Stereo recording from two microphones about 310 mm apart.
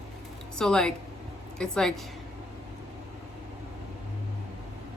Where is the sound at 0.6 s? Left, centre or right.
Centre.